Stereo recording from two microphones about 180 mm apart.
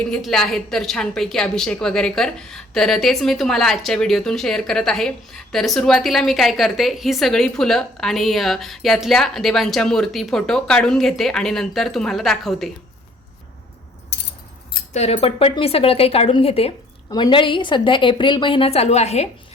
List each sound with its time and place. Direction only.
0.0 s a woman's voice: 5° left (ahead or behind)
14.9 s a woman's voice: 35° left (ahead or behind)